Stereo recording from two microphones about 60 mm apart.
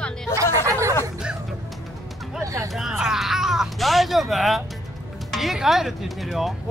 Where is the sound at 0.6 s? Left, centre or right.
Right.